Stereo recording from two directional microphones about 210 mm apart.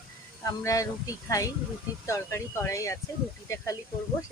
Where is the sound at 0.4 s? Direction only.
15° left (ahead or behind).